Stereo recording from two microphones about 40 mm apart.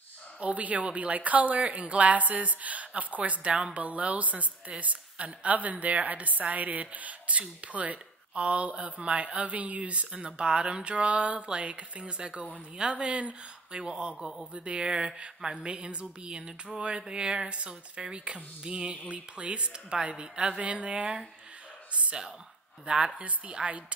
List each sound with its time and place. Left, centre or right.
0.4 s speech: right
20.6 s speech: right
22.8 s speech: right